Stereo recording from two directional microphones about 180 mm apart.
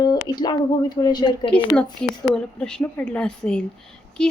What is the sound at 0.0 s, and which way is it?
Speech, 25° left (ahead or behind).